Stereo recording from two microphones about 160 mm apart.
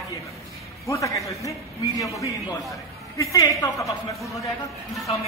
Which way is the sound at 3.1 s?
20° left (ahead or behind).